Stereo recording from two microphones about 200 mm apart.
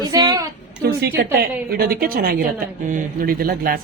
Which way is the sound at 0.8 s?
50° right (ahead or behind).